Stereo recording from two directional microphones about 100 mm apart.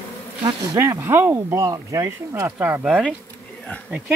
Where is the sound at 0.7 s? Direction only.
25° right (ahead or behind).